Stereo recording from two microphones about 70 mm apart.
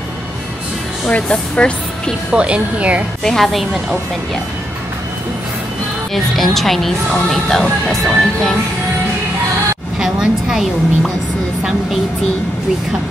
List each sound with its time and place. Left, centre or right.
1.0 s speech: centre
2.3 s speech: centre
3.3 s speech: centre
6.1 s speech: centre
9.9 s a woman's voice: centre